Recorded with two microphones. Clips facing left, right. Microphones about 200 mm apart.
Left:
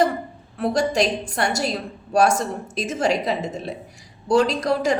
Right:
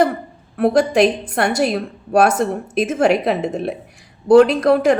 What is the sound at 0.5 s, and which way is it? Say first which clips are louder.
A woman's voice: right 6 dB; 60° right (ahead or behind).